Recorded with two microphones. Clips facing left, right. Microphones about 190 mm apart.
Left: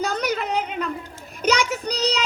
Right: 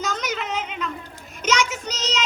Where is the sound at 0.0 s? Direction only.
35° left (ahead or behind).